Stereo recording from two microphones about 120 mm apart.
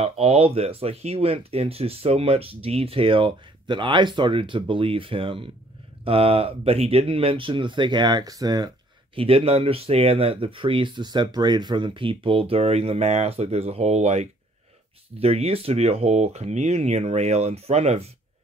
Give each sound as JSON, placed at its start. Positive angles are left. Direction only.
{"t": 0.0, "sound": "speech", "side_deg": -55}
{"t": 9.1, "sound": "speech", "side_deg": -50}
{"t": 15.1, "sound": "speech", "side_deg": -55}